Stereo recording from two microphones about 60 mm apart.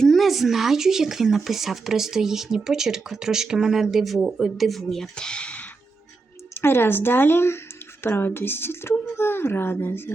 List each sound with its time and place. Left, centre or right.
0.0 s speech: centre
5.1 s speech: centre
6.5 s speech: left